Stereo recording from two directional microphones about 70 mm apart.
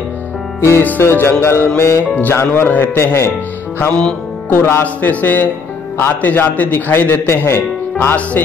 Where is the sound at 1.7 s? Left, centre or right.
Left.